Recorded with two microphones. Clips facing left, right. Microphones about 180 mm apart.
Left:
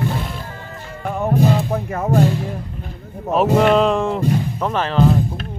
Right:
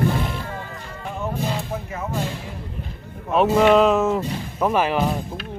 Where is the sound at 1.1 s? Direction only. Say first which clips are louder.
Left 9 dB; 55° left (ahead or behind).